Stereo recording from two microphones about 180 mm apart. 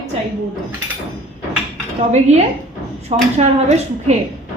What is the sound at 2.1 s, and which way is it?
A woman's voice, 40° right (ahead or behind).